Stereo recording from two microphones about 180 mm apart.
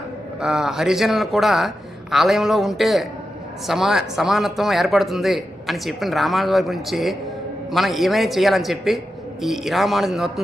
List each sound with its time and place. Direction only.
0.4 s speech: 5° right (ahead or behind)